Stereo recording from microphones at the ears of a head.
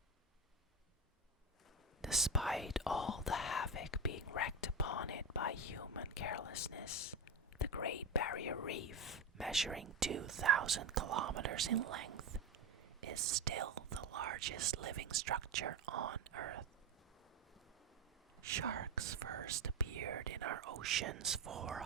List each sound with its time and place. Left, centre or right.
2.0 s whispering: centre
3.1 s whispering: left
9.8 s speech: right
18.4 s speech: right